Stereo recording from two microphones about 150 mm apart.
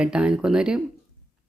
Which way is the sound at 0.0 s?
5° right (ahead or behind).